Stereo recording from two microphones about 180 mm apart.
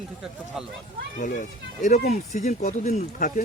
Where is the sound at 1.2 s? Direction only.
45° left (ahead or behind).